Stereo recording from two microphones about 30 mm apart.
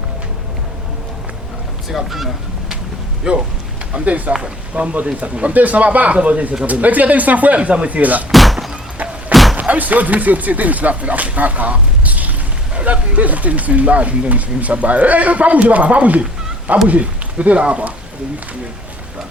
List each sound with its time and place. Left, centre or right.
1.9 s speech: centre
3.3 s speech: right
3.9 s speech: right
5.5 s speech: right
6.1 s speech: right
6.7 s speech: right
7.9 s speech: right
8.3 s thunk: centre
9.3 s slam: centre
9.6 s speech: right